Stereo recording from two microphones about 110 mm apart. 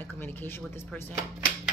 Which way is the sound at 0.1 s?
20° left (ahead or behind).